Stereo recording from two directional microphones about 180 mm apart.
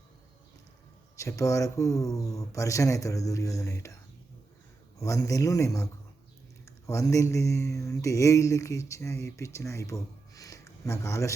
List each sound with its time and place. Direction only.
1.1 s speech: 15° left (ahead or behind)
4.9 s speech: 15° left (ahead or behind)